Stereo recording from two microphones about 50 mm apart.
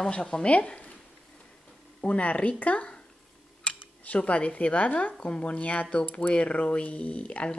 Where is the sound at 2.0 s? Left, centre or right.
Left.